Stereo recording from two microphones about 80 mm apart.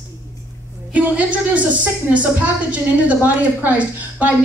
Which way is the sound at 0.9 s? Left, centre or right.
Centre.